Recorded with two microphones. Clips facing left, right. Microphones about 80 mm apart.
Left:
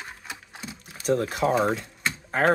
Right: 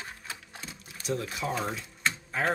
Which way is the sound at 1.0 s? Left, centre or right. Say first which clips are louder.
Left 9 dB; left.